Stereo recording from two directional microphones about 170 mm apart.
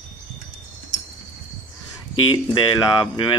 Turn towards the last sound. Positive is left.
turn(degrees=25)  # may be behind; listen again after turning